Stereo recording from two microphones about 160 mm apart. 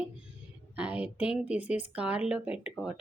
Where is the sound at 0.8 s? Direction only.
10° right (ahead or behind).